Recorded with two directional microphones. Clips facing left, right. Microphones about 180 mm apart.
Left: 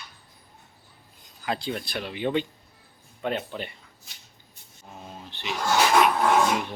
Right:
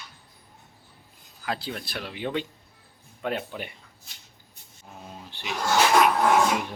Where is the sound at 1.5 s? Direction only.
Centre (ahead or behind).